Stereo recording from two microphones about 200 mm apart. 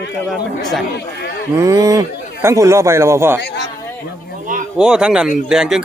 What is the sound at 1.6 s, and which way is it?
A man's voice, 15° right (ahead or behind).